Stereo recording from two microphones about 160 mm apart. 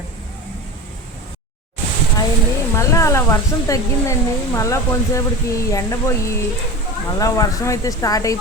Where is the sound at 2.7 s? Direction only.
20° left (ahead or behind).